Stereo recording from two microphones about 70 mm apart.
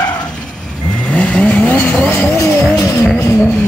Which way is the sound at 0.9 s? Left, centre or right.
Centre.